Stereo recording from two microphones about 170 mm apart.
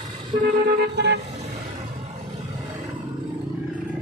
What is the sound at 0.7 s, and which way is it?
Vehicle, 75° right (ahead or behind).